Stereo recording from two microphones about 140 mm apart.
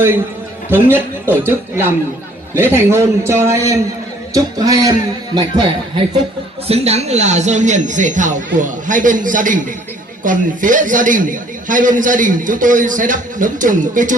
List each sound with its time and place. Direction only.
0.7 s a man's voice: 15° right (ahead or behind)
6.7 s a man's voice: 50° right (ahead or behind); by 14.2 s 65° right (ahead or behind)